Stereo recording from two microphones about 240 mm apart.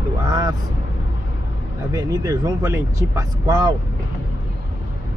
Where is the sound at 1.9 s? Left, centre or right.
Centre.